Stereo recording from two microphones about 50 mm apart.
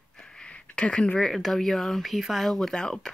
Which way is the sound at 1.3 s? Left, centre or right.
Centre.